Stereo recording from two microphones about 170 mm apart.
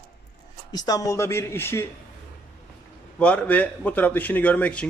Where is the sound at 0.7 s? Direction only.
20° left (ahead or behind).